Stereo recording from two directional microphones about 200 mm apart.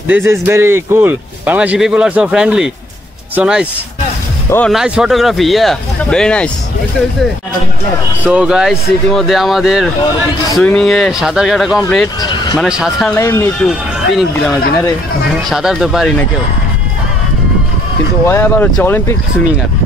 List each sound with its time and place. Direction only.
0.1 s speech: 10° right (ahead or behind); by 6.5 s 5° left (ahead or behind)
8.2 s speech: 5° right (ahead or behind)
12.2 s speech: 20° left (ahead or behind)
12.5 s speech: 5° right (ahead or behind)
13.2 s speech: 10° left (ahead or behind)
13.7 s speech: centre (ahead or behind)
15.5 s speech: 5° right (ahead or behind)
18.2 s speech: 10° left (ahead or behind)